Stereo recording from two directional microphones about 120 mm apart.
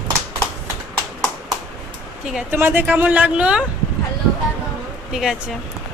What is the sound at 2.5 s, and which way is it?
Speech, 15° right (ahead or behind).